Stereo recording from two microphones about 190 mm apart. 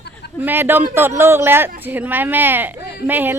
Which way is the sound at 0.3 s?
10° right (ahead or behind).